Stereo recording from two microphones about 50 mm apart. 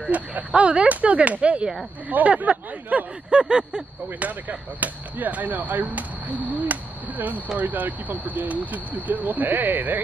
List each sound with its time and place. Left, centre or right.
0.0 s speech: right
3.3 s a sound: centre
4.2 s speech: right